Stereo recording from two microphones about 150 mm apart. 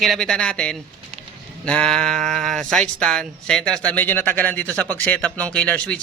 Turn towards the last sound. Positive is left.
turn(degrees=10)  # may be behind; listen again after turning